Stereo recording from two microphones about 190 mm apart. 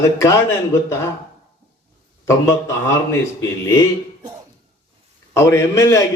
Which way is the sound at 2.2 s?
15° left (ahead or behind).